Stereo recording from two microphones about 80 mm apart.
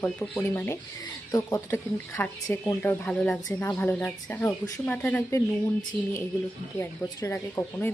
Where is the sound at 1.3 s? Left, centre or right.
Left.